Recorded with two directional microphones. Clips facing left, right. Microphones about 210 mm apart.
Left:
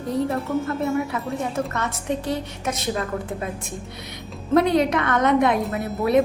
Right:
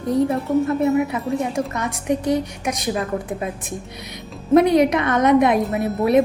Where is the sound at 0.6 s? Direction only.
20° right (ahead or behind).